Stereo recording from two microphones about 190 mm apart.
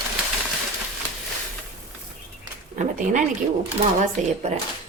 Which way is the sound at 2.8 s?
40° right (ahead or behind).